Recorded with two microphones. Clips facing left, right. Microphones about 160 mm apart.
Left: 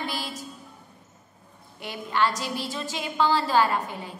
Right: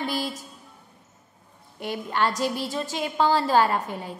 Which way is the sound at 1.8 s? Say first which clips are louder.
Even; 45° right (ahead or behind).